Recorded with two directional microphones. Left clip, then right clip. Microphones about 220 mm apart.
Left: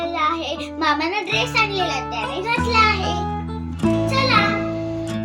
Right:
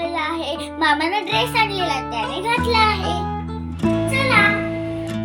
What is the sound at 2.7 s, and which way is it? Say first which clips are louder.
Music: left 1 dB; 30° right (ahead or behind).